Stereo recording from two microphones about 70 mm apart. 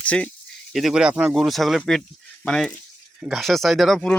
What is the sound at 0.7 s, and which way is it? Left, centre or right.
Speech, centre.